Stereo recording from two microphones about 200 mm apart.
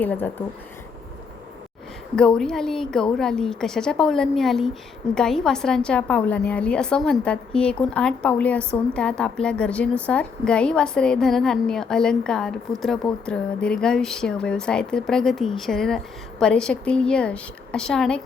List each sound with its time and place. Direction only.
0.0 s speech: 10° left (ahead or behind)
2.1 s a woman's voice: 5° left (ahead or behind)